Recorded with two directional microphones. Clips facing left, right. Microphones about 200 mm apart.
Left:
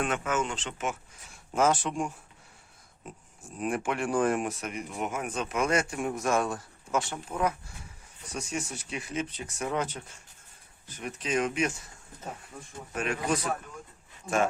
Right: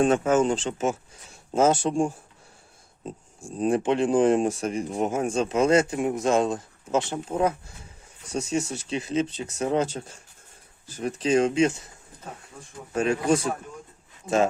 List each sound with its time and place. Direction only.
0.0 s speech: 30° right (ahead or behind)
12.9 s speech: 30° right (ahead or behind)